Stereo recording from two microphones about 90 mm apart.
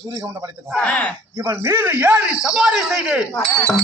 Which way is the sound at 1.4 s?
35° right (ahead or behind).